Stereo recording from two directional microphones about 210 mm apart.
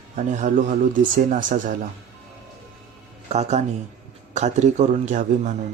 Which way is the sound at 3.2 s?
30° right (ahead or behind).